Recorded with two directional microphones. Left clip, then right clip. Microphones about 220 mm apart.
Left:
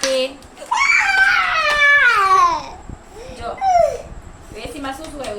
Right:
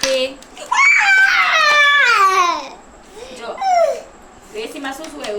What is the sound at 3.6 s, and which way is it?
Dog, 10° left (ahead or behind).